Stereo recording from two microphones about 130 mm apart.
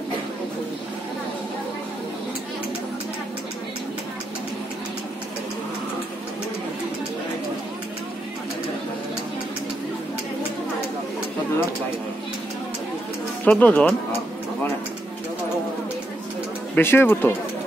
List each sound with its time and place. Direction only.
13.5 s speech: 10° left (ahead or behind)
16.7 s speech: 15° left (ahead or behind)